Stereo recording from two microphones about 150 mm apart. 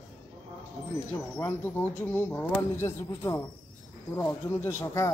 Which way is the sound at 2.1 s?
15° left (ahead or behind).